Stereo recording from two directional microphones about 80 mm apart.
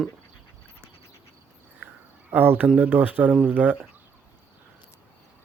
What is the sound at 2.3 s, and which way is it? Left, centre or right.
Speech, right.